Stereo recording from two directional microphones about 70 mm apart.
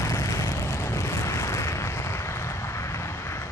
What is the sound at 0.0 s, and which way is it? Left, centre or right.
Vehicle, left.